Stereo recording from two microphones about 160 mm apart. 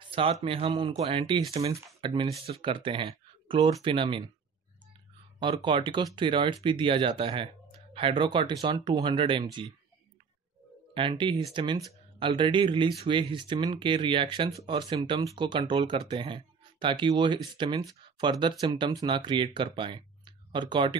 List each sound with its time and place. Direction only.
0.1 s speech: 35° right (ahead or behind)
0.7 s speech: 30° right (ahead or behind)
5.4 s speech: 30° right (ahead or behind)
11.0 s speech: 30° right (ahead or behind)